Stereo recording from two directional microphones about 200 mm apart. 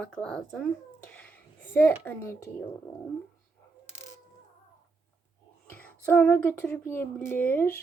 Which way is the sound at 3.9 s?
35° left (ahead or behind).